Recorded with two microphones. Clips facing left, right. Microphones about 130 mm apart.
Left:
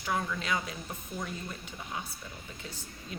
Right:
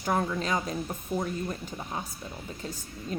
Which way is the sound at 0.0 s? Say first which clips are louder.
Right 5 dB; 40° right (ahead or behind).